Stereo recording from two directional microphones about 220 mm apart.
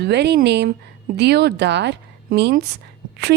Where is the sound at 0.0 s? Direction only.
50° right (ahead or behind).